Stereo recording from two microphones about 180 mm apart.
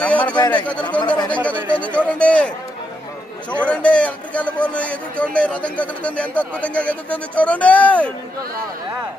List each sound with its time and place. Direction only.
0.0 s a man's voice: 5° left (ahead or behind)
0.3 s speech: 25° left (ahead or behind)
0.6 s a man's voice: 5° left (ahead or behind)
1.0 s speech: 25° left (ahead or behind)
1.7 s a man's voice: 5° left (ahead or behind)
3.6 s a man's voice: 5° left (ahead or behind)